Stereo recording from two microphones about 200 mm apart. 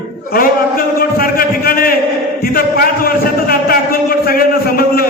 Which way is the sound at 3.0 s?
45° left (ahead or behind).